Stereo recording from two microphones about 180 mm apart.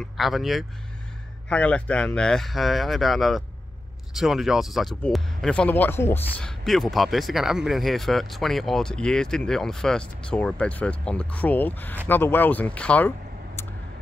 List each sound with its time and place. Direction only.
0.0 s speech: centre (ahead or behind)
6.6 s speech: centre (ahead or behind)